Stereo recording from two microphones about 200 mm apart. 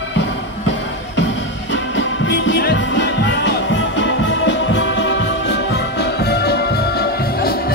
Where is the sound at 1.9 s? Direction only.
65° left (ahead or behind).